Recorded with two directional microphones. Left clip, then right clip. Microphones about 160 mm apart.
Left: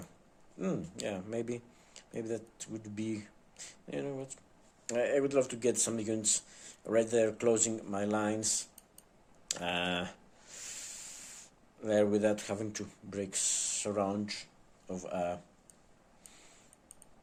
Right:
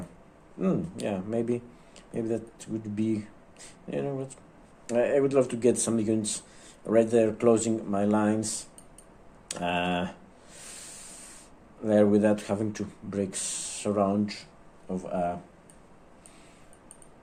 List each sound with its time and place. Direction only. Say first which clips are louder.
0.6 s speech: right 7 dB; 25° left (ahead or behind)
14.8 s speech: right 6 dB; 50° left (ahead or behind)